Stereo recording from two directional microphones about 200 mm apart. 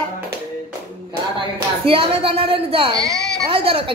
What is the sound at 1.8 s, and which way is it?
A woman's voice, 25° right (ahead or behind).